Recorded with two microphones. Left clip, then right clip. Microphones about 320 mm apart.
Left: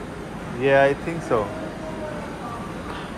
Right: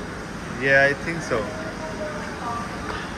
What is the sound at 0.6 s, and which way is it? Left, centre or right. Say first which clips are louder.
Speech: even; centre.